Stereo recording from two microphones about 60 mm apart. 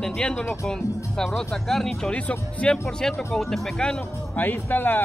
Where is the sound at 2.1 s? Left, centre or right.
Centre.